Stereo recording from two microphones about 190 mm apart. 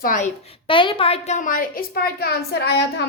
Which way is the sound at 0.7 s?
25° left (ahead or behind).